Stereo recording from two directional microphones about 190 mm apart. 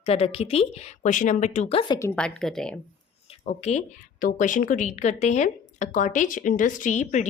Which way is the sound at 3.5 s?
35° left (ahead or behind).